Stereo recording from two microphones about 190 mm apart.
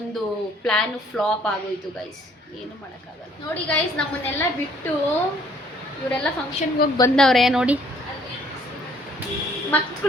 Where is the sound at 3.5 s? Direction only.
10° left (ahead or behind).